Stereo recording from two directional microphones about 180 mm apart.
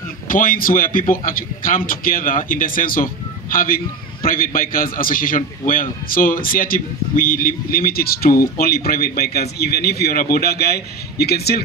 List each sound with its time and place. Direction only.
0.3 s a man's voice: 50° left (ahead or behind)